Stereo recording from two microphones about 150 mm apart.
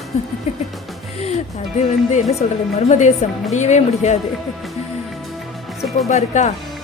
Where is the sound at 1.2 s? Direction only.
50° left (ahead or behind).